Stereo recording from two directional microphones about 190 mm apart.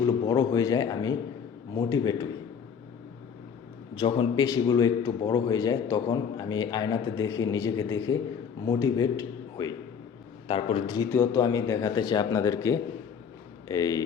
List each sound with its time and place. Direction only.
0.0 s a man's voice: 20° left (ahead or behind)
3.9 s a man's voice: 25° left (ahead or behind)